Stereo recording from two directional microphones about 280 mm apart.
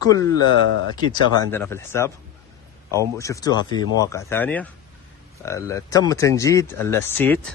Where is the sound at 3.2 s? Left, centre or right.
Centre.